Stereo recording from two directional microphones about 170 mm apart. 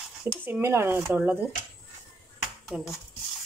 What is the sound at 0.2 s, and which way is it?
Speech, 10° right (ahead or behind).